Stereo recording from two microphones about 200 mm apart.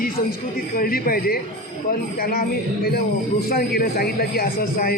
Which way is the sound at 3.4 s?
50° left (ahead or behind).